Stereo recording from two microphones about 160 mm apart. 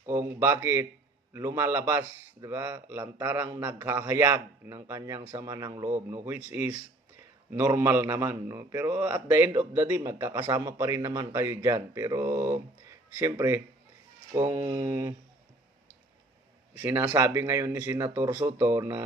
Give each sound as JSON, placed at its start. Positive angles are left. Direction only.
{"t": 0.0, "sound": "a man's voice", "side_deg": -15}
{"t": 16.8, "sound": "a man's voice", "side_deg": -10}